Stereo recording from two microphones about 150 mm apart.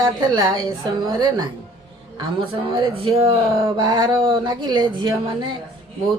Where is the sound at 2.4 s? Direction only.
35° right (ahead or behind).